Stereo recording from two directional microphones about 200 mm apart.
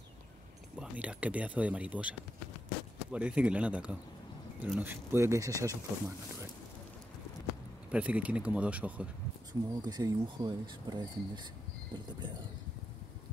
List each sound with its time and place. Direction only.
0.7 s a man's voice: 5° right (ahead or behind)
7.9 s speech: 5° right (ahead or behind)
9.5 s speech: 20° right (ahead or behind)